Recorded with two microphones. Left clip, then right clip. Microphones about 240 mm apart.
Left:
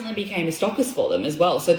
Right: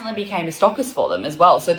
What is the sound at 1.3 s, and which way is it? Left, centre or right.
Speech, centre.